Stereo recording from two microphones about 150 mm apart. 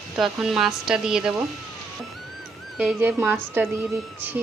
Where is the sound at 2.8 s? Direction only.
10° right (ahead or behind).